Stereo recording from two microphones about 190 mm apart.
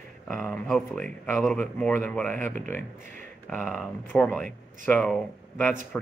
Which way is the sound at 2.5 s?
40° right (ahead or behind).